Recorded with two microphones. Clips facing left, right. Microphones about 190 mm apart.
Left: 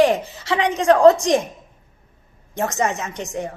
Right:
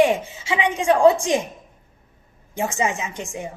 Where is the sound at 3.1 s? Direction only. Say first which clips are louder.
Left 2 dB; 35° left (ahead or behind).